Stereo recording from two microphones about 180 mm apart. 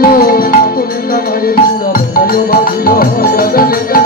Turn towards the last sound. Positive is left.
turn(degrees=55)  # may be behind; listen again after turning